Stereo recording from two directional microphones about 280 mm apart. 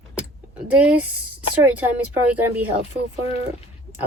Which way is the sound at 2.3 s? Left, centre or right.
Centre.